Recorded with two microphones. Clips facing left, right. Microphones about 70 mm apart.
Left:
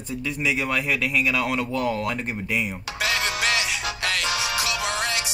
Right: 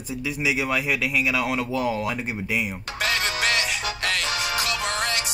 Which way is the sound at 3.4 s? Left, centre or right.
Centre.